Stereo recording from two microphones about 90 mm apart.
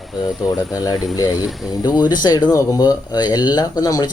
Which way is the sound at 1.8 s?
50° left (ahead or behind).